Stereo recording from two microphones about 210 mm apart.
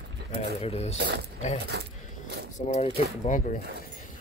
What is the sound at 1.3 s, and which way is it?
Speech, 30° left (ahead or behind).